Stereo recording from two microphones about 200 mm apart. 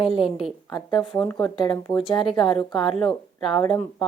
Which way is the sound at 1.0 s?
Centre (ahead or behind).